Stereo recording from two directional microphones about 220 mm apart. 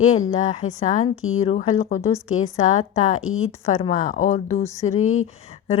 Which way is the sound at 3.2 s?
70° left (ahead or behind).